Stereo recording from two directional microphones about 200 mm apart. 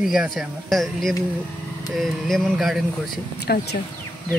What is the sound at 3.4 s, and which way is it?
Speech, 55° left (ahead or behind).